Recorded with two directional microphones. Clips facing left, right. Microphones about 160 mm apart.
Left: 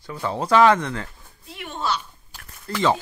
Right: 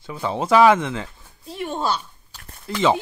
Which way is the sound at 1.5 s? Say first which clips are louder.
Right 3 dB; 40° right (ahead or behind).